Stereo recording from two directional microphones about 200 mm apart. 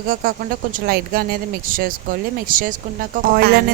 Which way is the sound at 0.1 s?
45° right (ahead or behind).